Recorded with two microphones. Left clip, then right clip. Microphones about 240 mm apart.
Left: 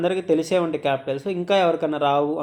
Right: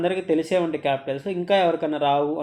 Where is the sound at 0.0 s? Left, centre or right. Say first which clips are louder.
Left 1 dB; left.